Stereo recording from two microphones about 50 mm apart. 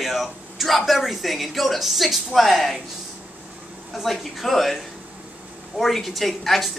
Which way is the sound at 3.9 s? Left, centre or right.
Centre.